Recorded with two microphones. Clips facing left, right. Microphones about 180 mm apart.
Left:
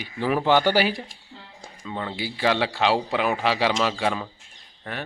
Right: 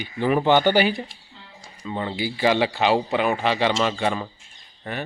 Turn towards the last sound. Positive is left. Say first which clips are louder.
# right 3 dB
turn(degrees=0)  # may be behind; listen again after turning